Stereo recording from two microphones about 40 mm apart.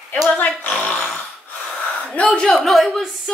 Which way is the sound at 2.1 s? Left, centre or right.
Left.